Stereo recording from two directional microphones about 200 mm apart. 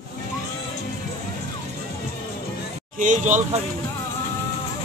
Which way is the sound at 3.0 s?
40° right (ahead or behind).